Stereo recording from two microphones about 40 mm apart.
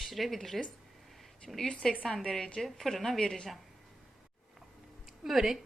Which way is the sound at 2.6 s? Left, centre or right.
Centre.